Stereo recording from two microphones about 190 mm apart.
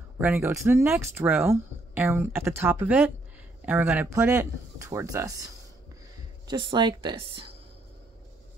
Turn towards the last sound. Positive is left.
turn(degrees=-25)  # may be behind; listen again after turning